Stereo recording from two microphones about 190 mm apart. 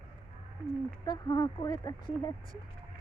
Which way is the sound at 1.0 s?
20° left (ahead or behind).